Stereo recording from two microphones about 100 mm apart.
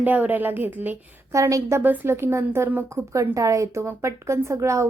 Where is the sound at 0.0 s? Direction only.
15° right (ahead or behind).